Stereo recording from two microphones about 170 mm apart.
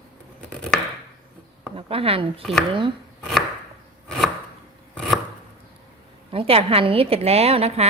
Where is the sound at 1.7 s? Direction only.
35° right (ahead or behind).